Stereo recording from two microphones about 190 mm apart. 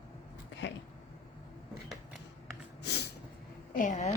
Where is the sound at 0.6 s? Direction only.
70° left (ahead or behind).